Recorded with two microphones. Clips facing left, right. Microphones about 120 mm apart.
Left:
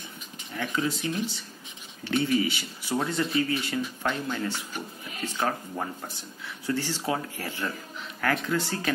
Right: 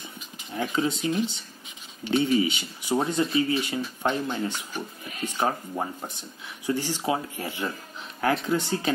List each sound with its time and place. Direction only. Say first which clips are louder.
0.5 s speech: right 3 dB; 25° right (ahead or behind)